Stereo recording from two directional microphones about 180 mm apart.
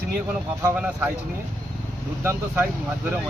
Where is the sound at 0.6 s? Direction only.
10° right (ahead or behind).